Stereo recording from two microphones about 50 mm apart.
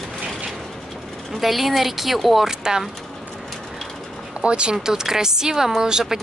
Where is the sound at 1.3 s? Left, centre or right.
Centre.